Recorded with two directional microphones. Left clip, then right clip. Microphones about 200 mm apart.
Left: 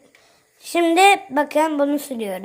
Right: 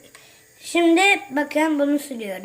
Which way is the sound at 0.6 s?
25° left (ahead or behind).